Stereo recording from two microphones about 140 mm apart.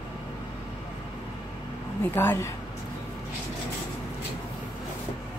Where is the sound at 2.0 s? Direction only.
15° left (ahead or behind).